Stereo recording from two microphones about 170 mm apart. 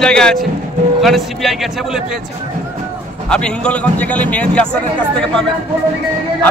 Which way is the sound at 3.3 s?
5° left (ahead or behind).